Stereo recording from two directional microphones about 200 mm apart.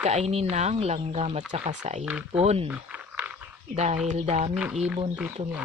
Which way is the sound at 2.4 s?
30° right (ahead or behind).